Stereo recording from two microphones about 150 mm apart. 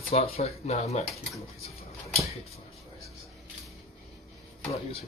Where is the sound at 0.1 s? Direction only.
45° left (ahead or behind).